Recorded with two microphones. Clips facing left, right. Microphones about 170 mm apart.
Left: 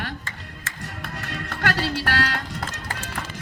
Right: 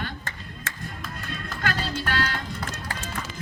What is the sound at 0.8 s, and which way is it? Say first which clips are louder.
Music: left 5 dB; 70° left (ahead or behind).